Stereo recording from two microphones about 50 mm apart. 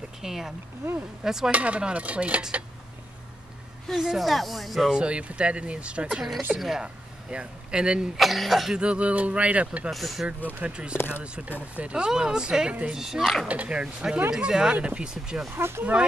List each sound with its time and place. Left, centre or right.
0.2 s speech: centre
1.5 s speech: right
3.9 s speech: centre
4.9 s speech: right
8.2 s speech: centre
8.7 s speech: right
9.8 s speech: centre
10.6 s speech: centre
11.0 s speech: left
11.2 s speech: right
13.5 s speech: right
14.3 s speech: centre
15.5 s speech: right
15.8 s speech: right